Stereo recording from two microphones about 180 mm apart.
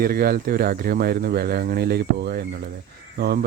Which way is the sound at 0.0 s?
55° right (ahead or behind).